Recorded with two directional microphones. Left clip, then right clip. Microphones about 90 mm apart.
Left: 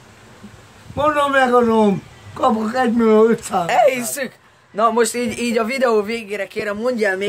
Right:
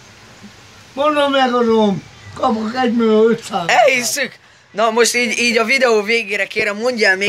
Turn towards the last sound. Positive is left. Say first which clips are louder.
# right 4 dB
turn(degrees=5)  # may be behind; listen again after turning